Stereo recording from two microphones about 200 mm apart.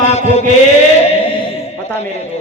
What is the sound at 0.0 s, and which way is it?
Chant, 35° left (ahead or behind).